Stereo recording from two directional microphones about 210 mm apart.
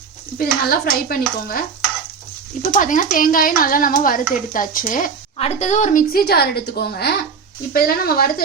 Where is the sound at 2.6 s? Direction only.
40° left (ahead or behind).